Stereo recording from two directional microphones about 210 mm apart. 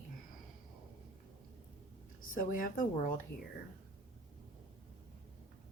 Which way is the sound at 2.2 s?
40° left (ahead or behind).